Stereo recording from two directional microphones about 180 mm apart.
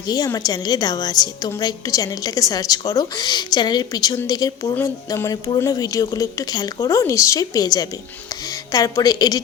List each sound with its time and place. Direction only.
0.1 s a woman's voice: 20° left (ahead or behind)
4.7 s a sound: 15° left (ahead or behind)
5.5 s a woman's voice: 20° left (ahead or behind)